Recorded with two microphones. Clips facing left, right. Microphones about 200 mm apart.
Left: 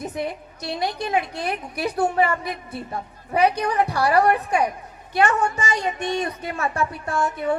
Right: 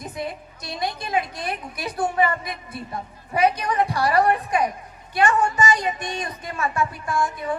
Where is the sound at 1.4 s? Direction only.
65° left (ahead or behind).